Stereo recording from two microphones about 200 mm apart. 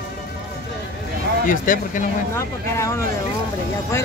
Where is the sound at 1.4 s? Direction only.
40° left (ahead or behind).